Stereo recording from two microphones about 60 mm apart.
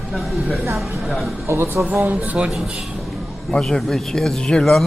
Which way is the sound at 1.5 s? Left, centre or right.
Right.